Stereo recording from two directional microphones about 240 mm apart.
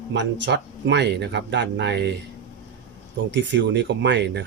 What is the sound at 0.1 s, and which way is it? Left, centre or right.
Speech, right.